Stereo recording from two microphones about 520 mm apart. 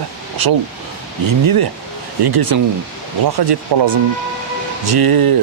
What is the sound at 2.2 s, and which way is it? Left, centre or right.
Speech, right.